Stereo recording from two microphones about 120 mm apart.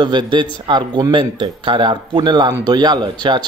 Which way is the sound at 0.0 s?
40° right (ahead or behind).